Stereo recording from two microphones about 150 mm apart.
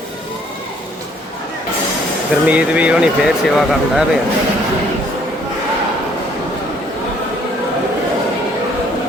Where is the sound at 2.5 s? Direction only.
10° right (ahead or behind).